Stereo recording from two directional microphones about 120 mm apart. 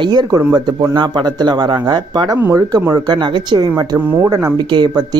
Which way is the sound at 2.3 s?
25° right (ahead or behind).